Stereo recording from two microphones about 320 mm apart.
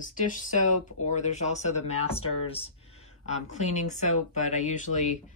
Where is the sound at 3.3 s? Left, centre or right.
Left.